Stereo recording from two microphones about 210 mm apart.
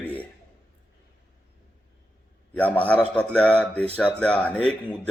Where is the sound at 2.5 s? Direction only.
5° left (ahead or behind).